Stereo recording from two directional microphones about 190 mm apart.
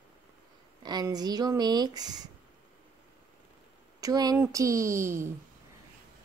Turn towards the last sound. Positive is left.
turn(degrees=-15)  # may be behind; listen again after turning